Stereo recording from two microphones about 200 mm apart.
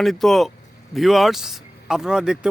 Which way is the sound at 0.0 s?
Centre (ahead or behind).